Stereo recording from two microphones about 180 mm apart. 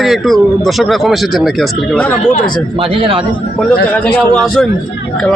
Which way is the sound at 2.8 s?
30° right (ahead or behind).